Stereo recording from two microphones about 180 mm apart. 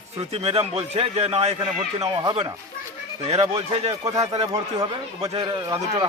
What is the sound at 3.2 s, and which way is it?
A man's voice, 35° right (ahead or behind).